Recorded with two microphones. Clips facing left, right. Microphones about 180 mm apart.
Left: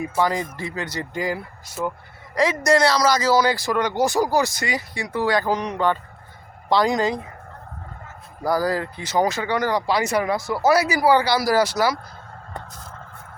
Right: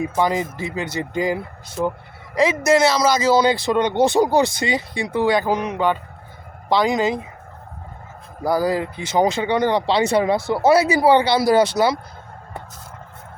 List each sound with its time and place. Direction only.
0.0 s speech: 20° right (ahead or behind)
6.7 s speech: centre (ahead or behind)
8.4 s speech: 20° right (ahead or behind)